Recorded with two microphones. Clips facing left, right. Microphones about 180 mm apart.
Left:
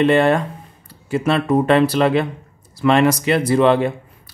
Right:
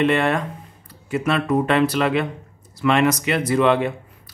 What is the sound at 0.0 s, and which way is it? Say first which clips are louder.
Speech: left 4 dB; 35° left (ahead or behind).